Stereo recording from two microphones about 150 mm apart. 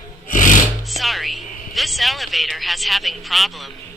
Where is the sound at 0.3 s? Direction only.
60° left (ahead or behind).